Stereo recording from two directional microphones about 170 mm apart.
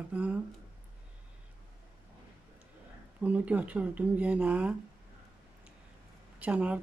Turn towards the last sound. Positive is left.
turn(degrees=-5)  # may be behind; listen again after turning